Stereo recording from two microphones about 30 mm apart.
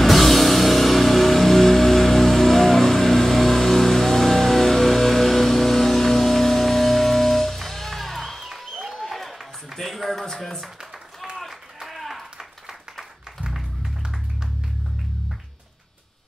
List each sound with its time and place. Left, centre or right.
0.0 s music: centre
8.9 s a sound: centre
11.3 s clapping: centre